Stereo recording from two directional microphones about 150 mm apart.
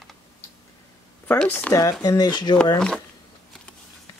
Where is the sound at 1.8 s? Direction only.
25° left (ahead or behind).